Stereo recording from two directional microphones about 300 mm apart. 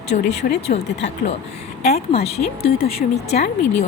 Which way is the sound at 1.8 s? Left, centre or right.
Left.